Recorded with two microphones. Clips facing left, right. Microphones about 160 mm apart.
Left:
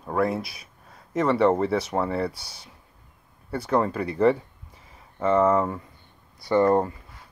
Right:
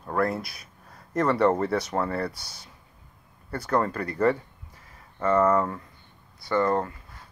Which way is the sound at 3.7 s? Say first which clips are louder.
Left 2 dB; 10° left (ahead or behind).